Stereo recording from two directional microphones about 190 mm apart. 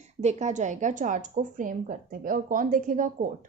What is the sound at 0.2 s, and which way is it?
A woman's voice, 35° right (ahead or behind).